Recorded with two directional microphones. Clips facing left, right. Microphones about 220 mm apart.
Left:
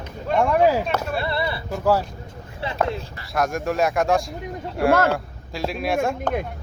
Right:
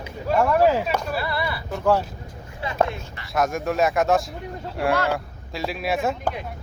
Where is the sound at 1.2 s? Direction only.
25° left (ahead or behind).